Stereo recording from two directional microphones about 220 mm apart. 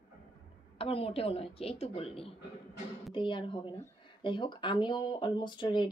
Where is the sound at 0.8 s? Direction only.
25° left (ahead or behind).